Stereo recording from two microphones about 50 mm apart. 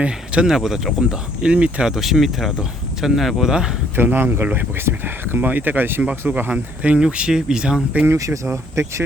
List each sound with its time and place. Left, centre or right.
0.4 s speech: centre
1.1 s speech: centre
1.9 s speech: centre
3.9 s speech: right
6.5 s speech: right
7.0 s speech: centre
8.0 s speech: right